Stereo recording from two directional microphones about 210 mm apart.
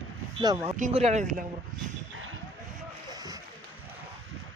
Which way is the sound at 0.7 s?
35° right (ahead or behind).